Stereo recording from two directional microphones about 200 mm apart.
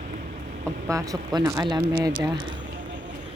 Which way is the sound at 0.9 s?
15° right (ahead or behind).